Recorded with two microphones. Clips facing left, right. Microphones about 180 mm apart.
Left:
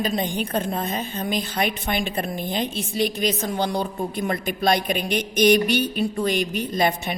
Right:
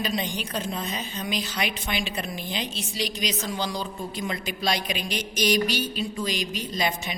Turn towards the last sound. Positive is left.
turn(degrees=55)  # may be behind; listen again after turning